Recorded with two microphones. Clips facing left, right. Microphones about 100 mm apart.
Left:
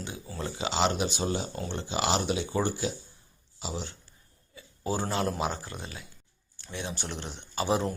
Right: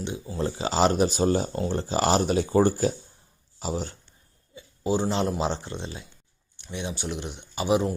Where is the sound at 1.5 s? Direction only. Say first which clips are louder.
Right 6 dB; 35° right (ahead or behind).